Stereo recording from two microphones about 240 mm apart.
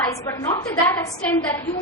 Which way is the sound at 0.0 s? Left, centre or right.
Centre.